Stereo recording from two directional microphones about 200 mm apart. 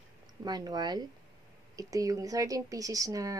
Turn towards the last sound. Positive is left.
turn(degrees=-15)  # may be behind; listen again after turning